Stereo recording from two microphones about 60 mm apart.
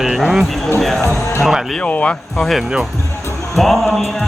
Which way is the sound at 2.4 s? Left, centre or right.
Centre.